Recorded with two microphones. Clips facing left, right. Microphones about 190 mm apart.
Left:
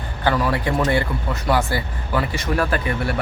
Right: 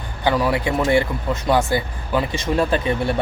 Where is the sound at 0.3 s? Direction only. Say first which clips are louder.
Right 1 dB; 15° right (ahead or behind).